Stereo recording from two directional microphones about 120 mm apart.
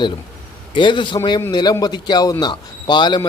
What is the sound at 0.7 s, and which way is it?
A man's voice, 40° left (ahead or behind).